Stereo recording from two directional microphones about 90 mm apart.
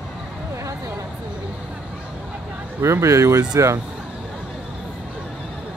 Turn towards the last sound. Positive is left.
turn(degrees=-35)  # may be behind; listen again after turning